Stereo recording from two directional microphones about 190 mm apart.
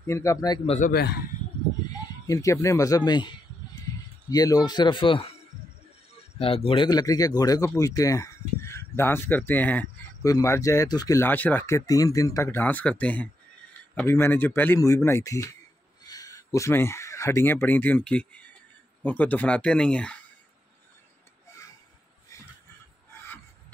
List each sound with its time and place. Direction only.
0.0 s speech: 15° left (ahead or behind)
0.7 s speech: 45° left (ahead or behind)
2.2 s speech: 15° left (ahead or behind)
6.3 s speech: 30° left (ahead or behind); by 20.2 s 5° left (ahead or behind)